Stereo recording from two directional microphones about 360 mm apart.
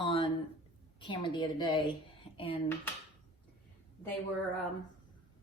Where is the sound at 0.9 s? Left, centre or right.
Centre.